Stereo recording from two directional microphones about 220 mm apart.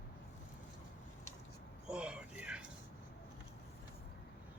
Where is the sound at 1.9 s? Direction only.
5° right (ahead or behind).